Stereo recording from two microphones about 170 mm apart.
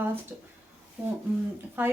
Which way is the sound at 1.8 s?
10° right (ahead or behind).